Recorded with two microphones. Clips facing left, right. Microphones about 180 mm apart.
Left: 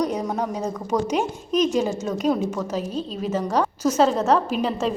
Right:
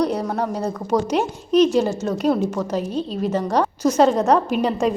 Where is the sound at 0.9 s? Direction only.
10° right (ahead or behind).